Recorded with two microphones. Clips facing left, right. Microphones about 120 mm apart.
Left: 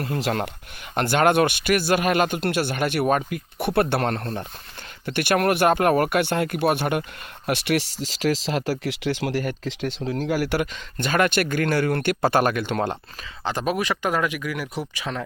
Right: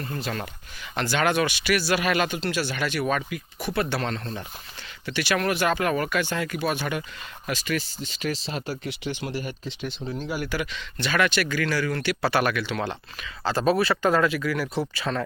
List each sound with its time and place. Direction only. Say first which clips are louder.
0.0 s speech: left 6 dB; 75° left (ahead or behind)
0.9 s speech: left 5 dB; 55° left (ahead or behind)
7.4 s speech: left 5 dB; 65° left (ahead or behind); by 10.2 s 90° left
10.2 s speech: left 7 dB; 75° left (ahead or behind)
10.6 s speech: left 4 dB; 45° left (ahead or behind)
13.4 s speech: right 3 dB; 15° left (ahead or behind)